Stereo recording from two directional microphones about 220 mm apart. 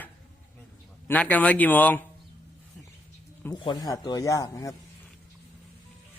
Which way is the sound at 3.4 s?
20° left (ahead or behind).